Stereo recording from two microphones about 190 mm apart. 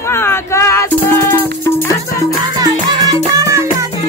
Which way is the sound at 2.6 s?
20° right (ahead or behind).